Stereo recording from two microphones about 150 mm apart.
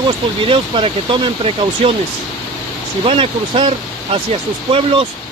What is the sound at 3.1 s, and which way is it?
Speech, 35° right (ahead or behind).